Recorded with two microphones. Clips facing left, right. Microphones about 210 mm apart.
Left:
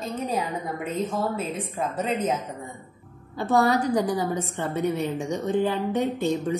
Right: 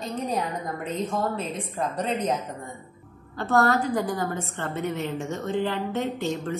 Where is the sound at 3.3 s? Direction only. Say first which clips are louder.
Left 1 dB; 15° left (ahead or behind).